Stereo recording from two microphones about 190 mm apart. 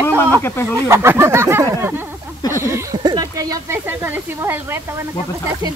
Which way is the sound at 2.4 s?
15° left (ahead or behind).